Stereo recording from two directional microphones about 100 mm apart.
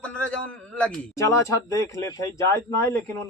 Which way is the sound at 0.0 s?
10° left (ahead or behind).